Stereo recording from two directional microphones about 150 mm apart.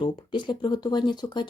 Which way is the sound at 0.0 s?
30° left (ahead or behind).